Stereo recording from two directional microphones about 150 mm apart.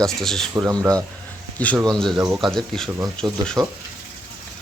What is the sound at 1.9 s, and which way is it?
Speech, 5° left (ahead or behind).